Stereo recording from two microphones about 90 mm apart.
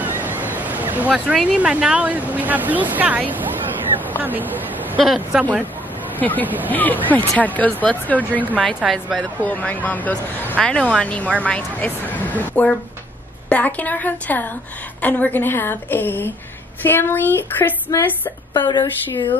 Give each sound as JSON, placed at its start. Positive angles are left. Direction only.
{"t": 0.0, "sound": "a sound", "side_deg": -20}
{"t": 1.1, "sound": "a woman's voice", "side_deg": -5}
{"t": 5.0, "sound": "a woman's voice", "side_deg": -5}
{"t": 6.2, "sound": "a woman's voice", "side_deg": 20}
{"t": 8.8, "sound": "a woman's voice", "side_deg": 0}
{"t": 9.4, "sound": "a woman's voice", "side_deg": 15}
{"t": 17.9, "sound": "a woman's voice", "side_deg": 35}
{"t": 18.5, "sound": "a woman's voice", "side_deg": 50}